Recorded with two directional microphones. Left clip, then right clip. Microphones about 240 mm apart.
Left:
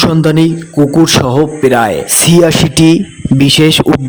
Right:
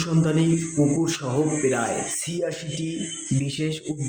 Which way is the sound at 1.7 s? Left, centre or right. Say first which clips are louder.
Left 15 dB; left.